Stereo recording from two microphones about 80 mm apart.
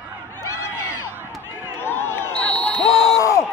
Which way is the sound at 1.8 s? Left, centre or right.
Left.